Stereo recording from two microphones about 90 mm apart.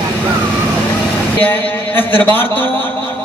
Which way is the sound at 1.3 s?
20° left (ahead or behind).